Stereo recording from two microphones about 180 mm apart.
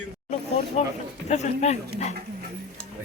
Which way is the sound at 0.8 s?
40° left (ahead or behind).